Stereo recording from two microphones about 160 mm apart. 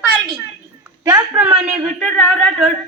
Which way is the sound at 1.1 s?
15° right (ahead or behind).